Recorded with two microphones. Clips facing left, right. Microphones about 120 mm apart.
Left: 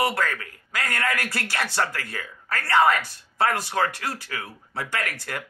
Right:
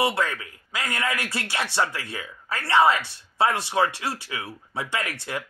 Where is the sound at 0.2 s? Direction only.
20° right (ahead or behind).